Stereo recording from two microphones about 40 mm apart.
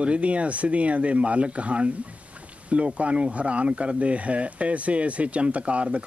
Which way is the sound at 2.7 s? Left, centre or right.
Right.